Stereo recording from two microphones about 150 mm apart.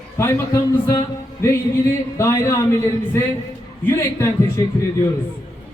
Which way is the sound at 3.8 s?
15° left (ahead or behind).